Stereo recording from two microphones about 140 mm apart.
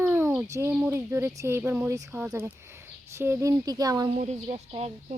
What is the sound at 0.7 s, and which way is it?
Speech, 10° right (ahead or behind).